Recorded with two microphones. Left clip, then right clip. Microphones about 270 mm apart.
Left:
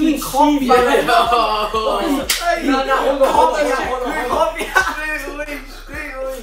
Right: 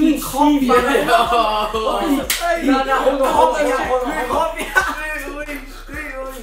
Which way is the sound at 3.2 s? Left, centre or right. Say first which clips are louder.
Left 1 dB; centre.